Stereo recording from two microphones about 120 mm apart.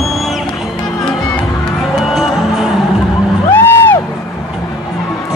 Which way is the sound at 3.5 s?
20° left (ahead or behind).